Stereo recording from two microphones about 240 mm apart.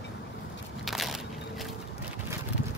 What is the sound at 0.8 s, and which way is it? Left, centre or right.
Crushing, centre.